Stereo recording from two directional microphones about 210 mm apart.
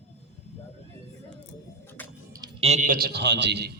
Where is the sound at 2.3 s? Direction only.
20° right (ahead or behind).